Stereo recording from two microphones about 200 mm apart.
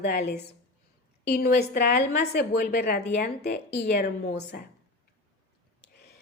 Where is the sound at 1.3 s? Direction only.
55° left (ahead or behind).